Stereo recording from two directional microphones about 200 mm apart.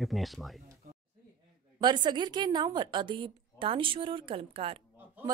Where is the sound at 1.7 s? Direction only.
20° right (ahead or behind).